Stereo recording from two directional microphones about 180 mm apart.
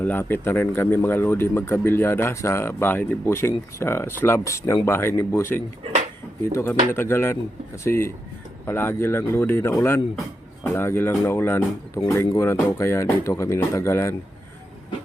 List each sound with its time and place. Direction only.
0.0 s speech: 10° left (ahead or behind)
5.8 s a sound: 40° right (ahead or behind)
6.4 s speech: 15° left (ahead or behind)